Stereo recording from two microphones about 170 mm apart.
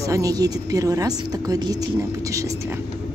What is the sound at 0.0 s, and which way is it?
A woman's voice, 20° right (ahead or behind).